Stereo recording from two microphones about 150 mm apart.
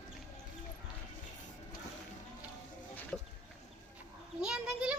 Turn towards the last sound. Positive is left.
turn(degrees=-5)  # may be behind; listen again after turning